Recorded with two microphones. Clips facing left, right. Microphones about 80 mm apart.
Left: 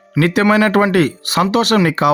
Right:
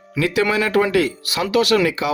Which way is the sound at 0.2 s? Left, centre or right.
Left.